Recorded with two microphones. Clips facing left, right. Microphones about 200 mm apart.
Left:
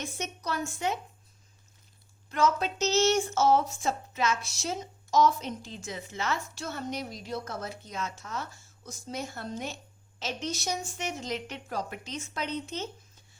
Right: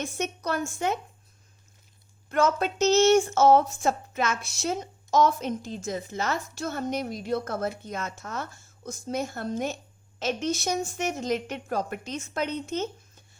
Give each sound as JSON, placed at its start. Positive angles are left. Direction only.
{"t": 0.0, "sound": "speech", "side_deg": -55}
{"t": 2.3, "sound": "speech", "side_deg": -55}